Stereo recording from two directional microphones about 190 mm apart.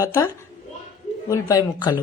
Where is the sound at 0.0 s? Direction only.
15° left (ahead or behind).